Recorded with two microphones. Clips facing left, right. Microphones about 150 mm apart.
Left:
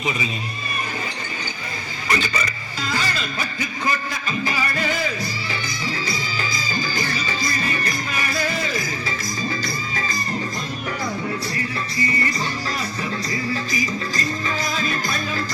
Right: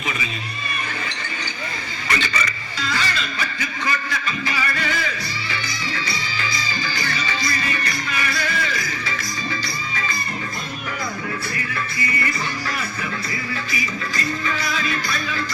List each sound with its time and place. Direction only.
2.0 s speech: 40° left (ahead or behind)
3.8 s a sound: 40° left (ahead or behind)
5.5 s music: 40° left (ahead or behind)
11.5 s music: 35° left (ahead or behind)